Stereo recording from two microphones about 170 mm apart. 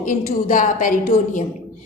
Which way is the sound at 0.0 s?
50° left (ahead or behind).